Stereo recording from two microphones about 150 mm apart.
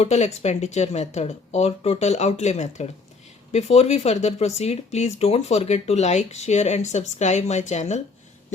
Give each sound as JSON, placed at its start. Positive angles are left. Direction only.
{"t": 0.0, "sound": "speech", "side_deg": 50}